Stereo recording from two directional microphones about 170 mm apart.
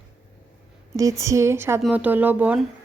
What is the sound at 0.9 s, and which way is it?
Speech, 20° right (ahead or behind).